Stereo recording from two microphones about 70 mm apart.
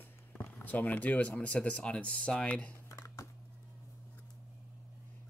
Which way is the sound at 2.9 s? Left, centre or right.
Left.